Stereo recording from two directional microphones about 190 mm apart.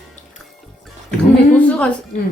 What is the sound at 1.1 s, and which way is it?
Speech, 5° left (ahead or behind).